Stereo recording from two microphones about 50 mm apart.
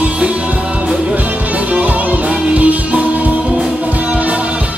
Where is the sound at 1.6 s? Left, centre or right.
Right.